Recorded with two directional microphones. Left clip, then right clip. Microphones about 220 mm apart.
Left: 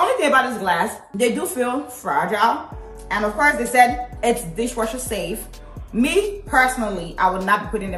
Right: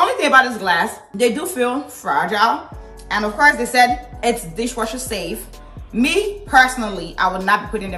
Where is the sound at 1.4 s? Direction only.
Centre (ahead or behind).